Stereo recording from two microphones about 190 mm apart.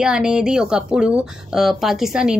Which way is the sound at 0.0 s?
5° right (ahead or behind).